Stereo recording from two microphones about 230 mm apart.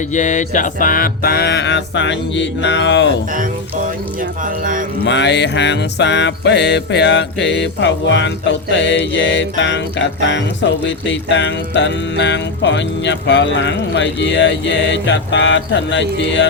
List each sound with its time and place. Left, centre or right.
0.1 s music: left
4.2 s speech: right
5.0 s music: left